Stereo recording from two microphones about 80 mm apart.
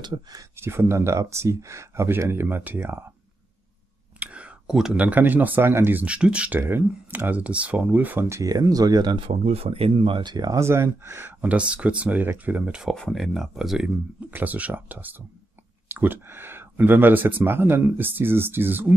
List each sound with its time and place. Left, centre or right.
0.0 s speech: right
0.6 s speech: right
4.2 s speech: centre
6.0 s speech: centre
6.6 s speech: right
8.3 s speech: right
10.0 s speech: right
10.5 s speech: right
11.4 s speech: centre
12.9 s speech: centre
14.3 s speech: right